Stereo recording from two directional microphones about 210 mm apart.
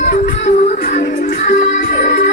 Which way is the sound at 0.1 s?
35° left (ahead or behind).